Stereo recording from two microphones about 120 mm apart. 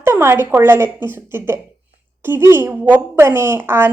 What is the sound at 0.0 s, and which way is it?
A woman's voice, 20° right (ahead or behind).